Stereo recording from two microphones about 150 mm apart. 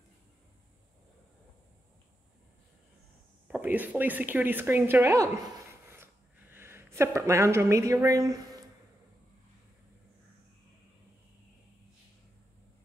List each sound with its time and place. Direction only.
3.4 s a woman's voice: 10° right (ahead or behind)